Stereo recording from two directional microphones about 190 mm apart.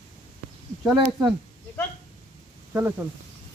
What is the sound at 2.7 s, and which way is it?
Speech, 10° right (ahead or behind).